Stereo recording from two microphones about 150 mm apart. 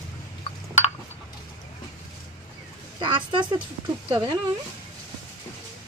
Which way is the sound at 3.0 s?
35° right (ahead or behind).